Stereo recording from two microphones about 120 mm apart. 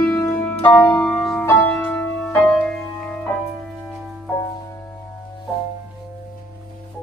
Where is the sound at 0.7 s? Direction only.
15° left (ahead or behind).